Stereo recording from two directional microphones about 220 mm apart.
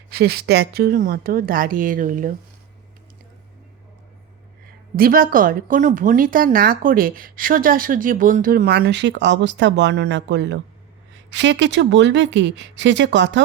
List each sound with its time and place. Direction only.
0.1 s a woman's voice: 45° right (ahead or behind)
4.9 s a woman's voice: 40° right (ahead or behind)